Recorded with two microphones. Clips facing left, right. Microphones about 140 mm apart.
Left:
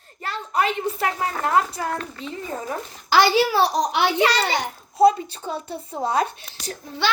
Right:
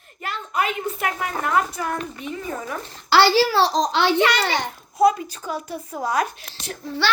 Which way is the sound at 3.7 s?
15° left (ahead or behind).